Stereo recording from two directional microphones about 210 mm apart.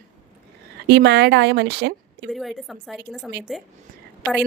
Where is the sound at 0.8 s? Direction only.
55° right (ahead or behind).